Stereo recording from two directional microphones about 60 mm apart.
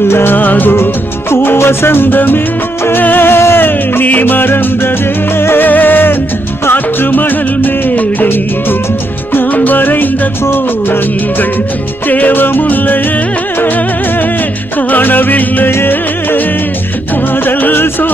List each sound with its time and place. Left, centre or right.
0.1 s music: left
14.8 s music: left
17.5 s music: left